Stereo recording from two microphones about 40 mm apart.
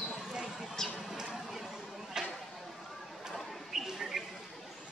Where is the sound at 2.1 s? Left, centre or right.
Centre.